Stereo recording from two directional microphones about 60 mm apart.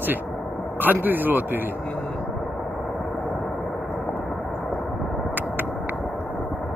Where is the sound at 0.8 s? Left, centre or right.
Right.